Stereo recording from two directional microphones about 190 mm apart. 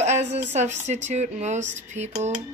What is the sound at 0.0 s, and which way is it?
A woman's voice, 35° right (ahead or behind).